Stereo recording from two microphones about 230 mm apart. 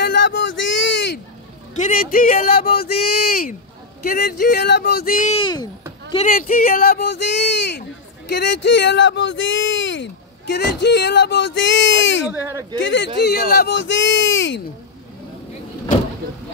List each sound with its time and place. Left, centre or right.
0.0 s a sound: left
1.8 s speech: left
5.3 s speech: centre
6.2 s speech: left
12.3 s speech: centre
12.8 s speech: left